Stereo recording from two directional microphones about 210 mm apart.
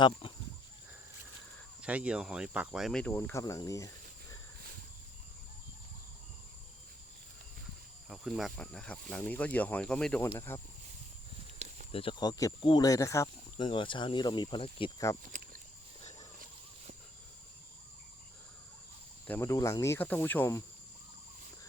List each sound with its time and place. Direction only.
0.0 s speech: 20° left (ahead or behind)
1.8 s speech: 5° right (ahead or behind); by 3.9 s 15° left (ahead or behind)
8.1 s speech: centre (ahead or behind)
11.9 s speech: 25° left (ahead or behind)
19.3 s speech: 15° left (ahead or behind)